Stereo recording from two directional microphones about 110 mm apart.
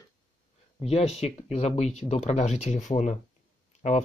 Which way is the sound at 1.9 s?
90° left.